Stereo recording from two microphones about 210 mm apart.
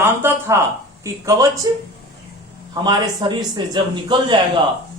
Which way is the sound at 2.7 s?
20° right (ahead or behind).